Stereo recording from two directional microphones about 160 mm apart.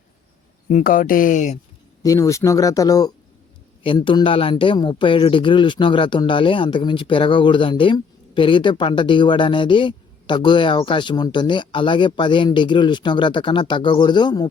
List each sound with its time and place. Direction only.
0.7 s speech: 55° left (ahead or behind)
2.0 s a man's voice: 20° left (ahead or behind)